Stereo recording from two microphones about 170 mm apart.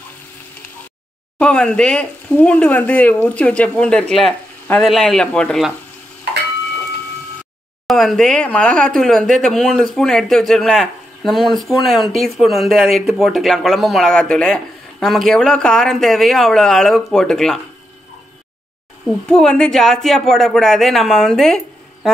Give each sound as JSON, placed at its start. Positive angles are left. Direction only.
{"t": 1.4, "sound": "speech", "side_deg": 5}
{"t": 7.8, "sound": "speech", "side_deg": 0}
{"t": 19.2, "sound": "speech", "side_deg": 5}